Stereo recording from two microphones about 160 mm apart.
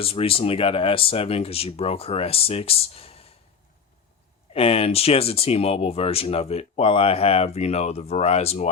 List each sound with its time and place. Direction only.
0.0 s speech: 35° left (ahead or behind)
4.5 s speech: 40° left (ahead or behind)